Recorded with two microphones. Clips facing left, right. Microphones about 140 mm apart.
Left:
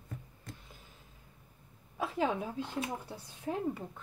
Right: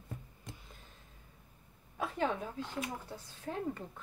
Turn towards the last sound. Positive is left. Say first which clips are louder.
# left 3 dB
turn(degrees=15)  # may be behind; listen again after turning